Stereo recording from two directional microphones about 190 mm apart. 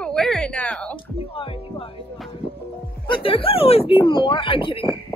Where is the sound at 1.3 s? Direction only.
30° left (ahead or behind).